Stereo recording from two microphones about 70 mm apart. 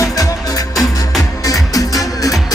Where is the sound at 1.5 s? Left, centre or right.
Left.